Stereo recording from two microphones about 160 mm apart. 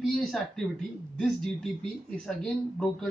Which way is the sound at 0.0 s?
Centre (ahead or behind).